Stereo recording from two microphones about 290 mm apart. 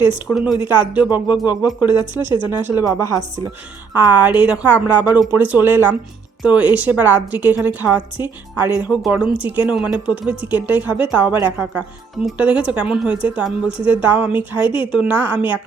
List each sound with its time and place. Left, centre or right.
0.3 s a woman's voice: centre
1.9 s speech: centre
2.5 s a woman's voice: centre
14.6 s speech: centre
14.9 s a woman's voice: centre